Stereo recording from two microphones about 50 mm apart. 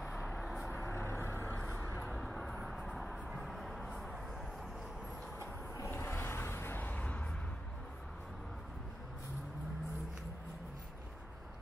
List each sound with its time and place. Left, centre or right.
0.0 s vehicle: centre
0.7 s vehicle: left
2.1 s vehicle: centre
3.3 s music: centre
5.9 s a sound: left
6.8 s music: left